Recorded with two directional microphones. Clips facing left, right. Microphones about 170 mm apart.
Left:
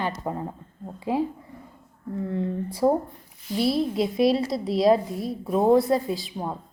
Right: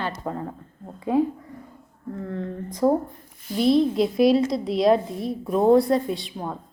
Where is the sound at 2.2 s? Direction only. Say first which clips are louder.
Left 4 dB; 15° left (ahead or behind).